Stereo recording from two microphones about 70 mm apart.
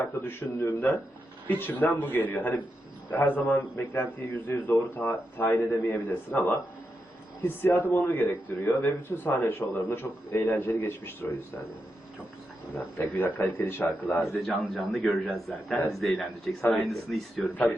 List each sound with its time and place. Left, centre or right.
0.0 s a man's voice: left
12.7 s a man's voice: left
14.9 s a man's voice: centre